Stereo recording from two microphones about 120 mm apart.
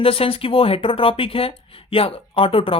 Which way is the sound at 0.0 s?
50° left (ahead or behind).